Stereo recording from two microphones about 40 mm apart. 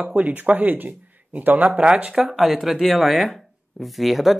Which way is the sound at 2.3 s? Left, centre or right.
Centre.